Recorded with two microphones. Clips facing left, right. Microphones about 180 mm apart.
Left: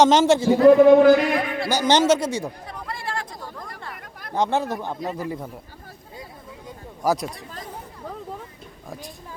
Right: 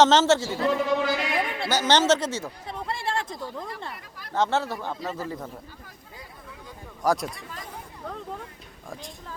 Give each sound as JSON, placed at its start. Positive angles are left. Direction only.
{"t": 0.0, "sound": "speech", "side_deg": 15}
{"t": 0.4, "sound": "speech", "side_deg": 55}
{"t": 1.7, "sound": "speech", "side_deg": 15}
{"t": 2.6, "sound": "a sound", "side_deg": -25}
{"t": 4.4, "sound": "speech", "side_deg": 15}
{"t": 7.0, "sound": "speech", "side_deg": 0}